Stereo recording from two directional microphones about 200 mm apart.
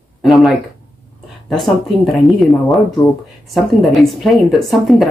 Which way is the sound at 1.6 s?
Centre (ahead or behind).